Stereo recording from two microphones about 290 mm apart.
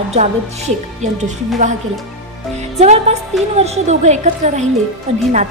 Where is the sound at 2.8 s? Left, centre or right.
Right.